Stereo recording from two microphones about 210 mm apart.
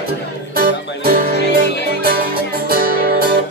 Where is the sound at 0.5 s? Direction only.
45° right (ahead or behind).